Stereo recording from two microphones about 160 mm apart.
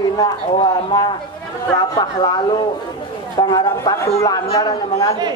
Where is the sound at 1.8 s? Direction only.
25° left (ahead or behind).